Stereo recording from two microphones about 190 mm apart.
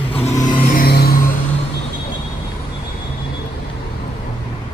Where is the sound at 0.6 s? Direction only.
50° left (ahead or behind).